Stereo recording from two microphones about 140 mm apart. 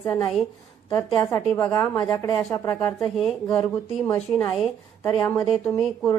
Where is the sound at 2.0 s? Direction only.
35° left (ahead or behind).